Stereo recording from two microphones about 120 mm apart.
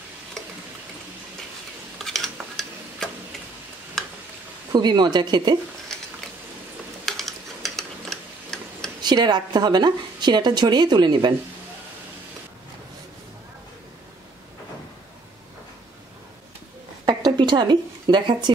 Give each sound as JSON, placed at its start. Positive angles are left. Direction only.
{"t": 2.0, "sound": "stir", "side_deg": 0}
{"t": 4.7, "sound": "a woman's voice", "side_deg": -35}
{"t": 7.1, "sound": "tick-tock", "side_deg": 0}
{"t": 9.0, "sound": "a woman's voice", "side_deg": -35}
{"t": 17.0, "sound": "a sound", "side_deg": -35}